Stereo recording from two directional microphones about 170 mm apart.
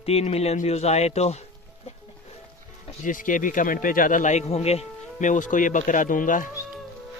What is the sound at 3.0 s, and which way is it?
Speech, 50° left (ahead or behind).